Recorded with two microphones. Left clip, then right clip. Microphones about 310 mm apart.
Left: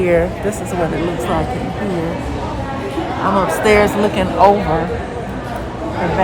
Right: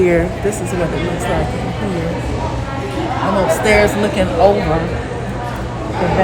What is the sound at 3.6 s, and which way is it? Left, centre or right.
Speech, centre.